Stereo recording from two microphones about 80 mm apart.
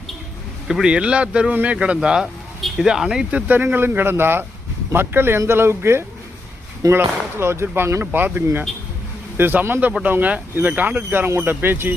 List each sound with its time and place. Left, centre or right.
0.7 s speech: centre
2.2 s vehicle: centre
2.8 s speech: centre
3.3 s speech: right